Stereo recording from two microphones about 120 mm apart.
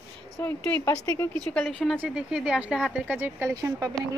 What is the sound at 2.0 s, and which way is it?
Speech, 10° right (ahead or behind).